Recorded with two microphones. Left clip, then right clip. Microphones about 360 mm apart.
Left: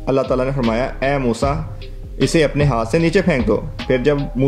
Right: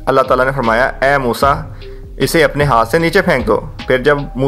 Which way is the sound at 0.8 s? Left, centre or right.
Right.